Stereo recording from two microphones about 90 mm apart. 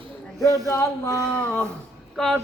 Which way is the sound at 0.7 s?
35° left (ahead or behind).